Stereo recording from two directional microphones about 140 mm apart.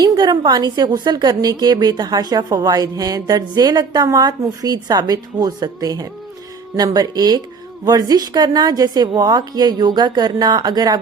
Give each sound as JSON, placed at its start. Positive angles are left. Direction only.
{"t": 0.0, "sound": "a woman's voice", "side_deg": -30}